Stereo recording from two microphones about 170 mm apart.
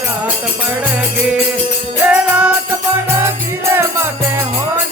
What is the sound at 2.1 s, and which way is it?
Music, 5° right (ahead or behind).